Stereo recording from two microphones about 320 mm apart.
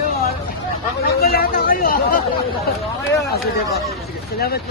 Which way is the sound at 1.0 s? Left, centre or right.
Left.